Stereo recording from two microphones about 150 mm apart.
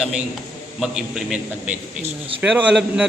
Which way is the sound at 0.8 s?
5° right (ahead or behind).